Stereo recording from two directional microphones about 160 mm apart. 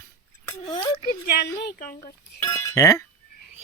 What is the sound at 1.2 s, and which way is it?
Speech, 80° left.